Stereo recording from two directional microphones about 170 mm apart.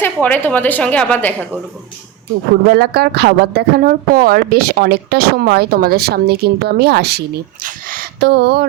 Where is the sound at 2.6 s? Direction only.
70° right (ahead or behind).